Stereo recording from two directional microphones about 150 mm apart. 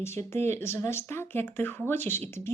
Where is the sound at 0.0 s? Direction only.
15° left (ahead or behind).